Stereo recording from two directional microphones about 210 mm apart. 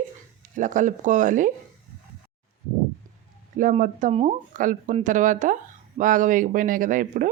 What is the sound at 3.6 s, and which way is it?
Speech, 40° right (ahead or behind).